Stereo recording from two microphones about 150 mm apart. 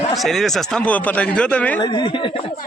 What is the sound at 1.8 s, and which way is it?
Speech, 30° left (ahead or behind).